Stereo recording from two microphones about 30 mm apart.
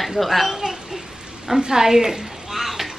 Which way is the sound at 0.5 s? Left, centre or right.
Centre.